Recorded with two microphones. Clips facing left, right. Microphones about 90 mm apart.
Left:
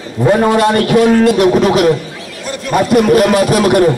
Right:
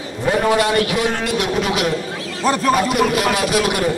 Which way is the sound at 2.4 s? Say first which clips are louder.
Right 7 dB; 40° right (ahead or behind).